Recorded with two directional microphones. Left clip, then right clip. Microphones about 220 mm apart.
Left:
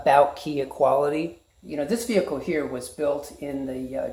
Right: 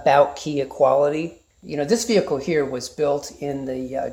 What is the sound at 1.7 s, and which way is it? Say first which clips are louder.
Speech: right 5 dB; 45° right (ahead or behind).